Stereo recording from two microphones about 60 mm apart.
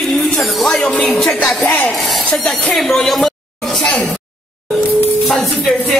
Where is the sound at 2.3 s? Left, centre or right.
Centre.